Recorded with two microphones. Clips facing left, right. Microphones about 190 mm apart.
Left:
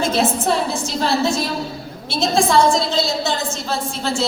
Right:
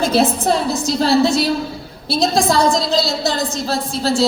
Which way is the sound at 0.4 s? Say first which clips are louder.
Right 3 dB; 35° right (ahead or behind).